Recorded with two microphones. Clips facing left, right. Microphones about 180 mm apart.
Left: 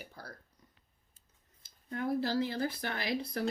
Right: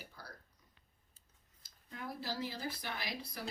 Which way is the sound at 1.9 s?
55° left (ahead or behind).